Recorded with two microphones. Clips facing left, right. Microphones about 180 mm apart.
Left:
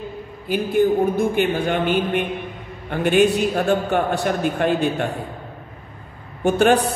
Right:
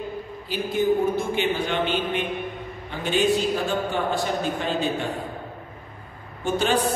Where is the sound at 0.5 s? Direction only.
55° left (ahead or behind).